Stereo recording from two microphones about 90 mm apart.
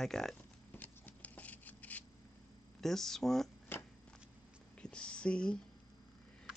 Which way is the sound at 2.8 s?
5° left (ahead or behind).